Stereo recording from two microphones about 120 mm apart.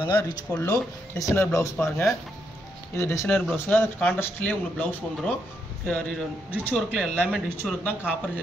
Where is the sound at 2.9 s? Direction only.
25° left (ahead or behind).